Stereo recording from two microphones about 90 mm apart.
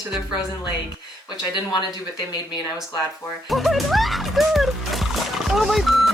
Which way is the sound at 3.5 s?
Centre (ahead or behind).